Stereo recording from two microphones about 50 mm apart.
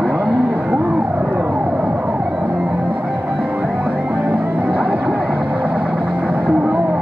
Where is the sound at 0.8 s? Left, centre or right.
Right.